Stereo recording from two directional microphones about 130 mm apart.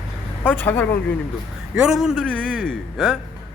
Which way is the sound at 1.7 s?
5° right (ahead or behind).